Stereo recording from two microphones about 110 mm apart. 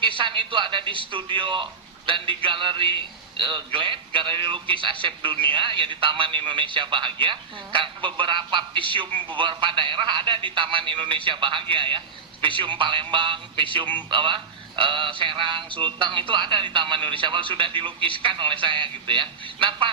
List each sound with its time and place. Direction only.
0.0 s speech: 50° right (ahead or behind)